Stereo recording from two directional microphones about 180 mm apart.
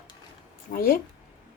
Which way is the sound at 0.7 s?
55° left (ahead or behind).